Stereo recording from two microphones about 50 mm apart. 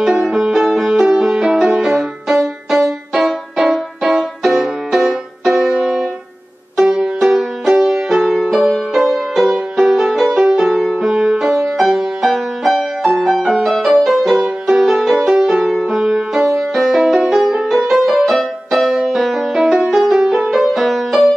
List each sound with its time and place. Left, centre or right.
0.0 s music: centre
20.6 s music: centre